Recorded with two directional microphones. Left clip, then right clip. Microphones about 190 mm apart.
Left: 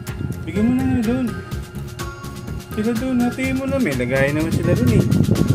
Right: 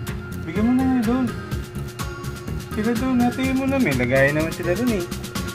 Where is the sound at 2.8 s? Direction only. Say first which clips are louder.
Left 1 dB; centre (ahead or behind).